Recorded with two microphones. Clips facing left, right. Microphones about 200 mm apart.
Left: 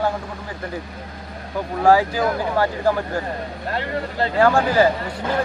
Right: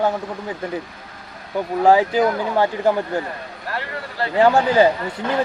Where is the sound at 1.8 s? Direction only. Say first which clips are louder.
Right 1 dB; 20° right (ahead or behind).